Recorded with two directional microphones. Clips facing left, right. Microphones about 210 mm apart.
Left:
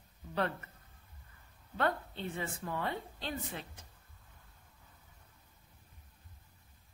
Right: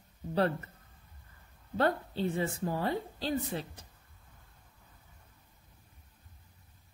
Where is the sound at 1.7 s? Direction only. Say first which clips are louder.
Right 5 dB; 35° right (ahead or behind).